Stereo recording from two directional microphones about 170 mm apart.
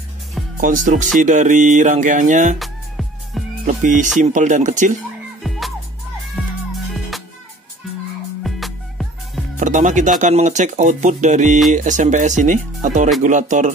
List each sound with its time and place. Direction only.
0.6 s speech: 50° right (ahead or behind)
2.6 s music: centre (ahead or behind)
3.6 s speech: 45° right (ahead or behind)
6.4 s music: 5° right (ahead or behind)
8.5 s music: centre (ahead or behind)
9.6 s speech: 50° right (ahead or behind)